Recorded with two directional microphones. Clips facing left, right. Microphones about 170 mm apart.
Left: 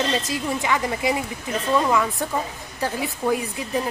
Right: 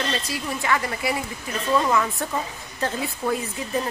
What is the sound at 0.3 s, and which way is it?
A woman's voice, 20° left (ahead or behind).